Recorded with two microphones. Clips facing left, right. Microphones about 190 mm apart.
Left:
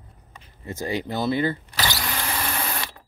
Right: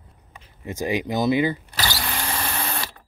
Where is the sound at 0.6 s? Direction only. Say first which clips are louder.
Right 3 dB; 15° right (ahead or behind).